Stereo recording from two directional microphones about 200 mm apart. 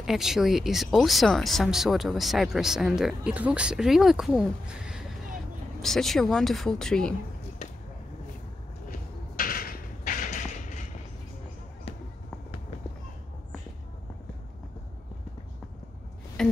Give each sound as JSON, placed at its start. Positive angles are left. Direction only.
{"t": 0.0, "sound": "speech", "side_deg": 0}
{"t": 9.4, "sound": "a sound", "side_deg": 45}
{"t": 16.4, "sound": "music", "side_deg": 0}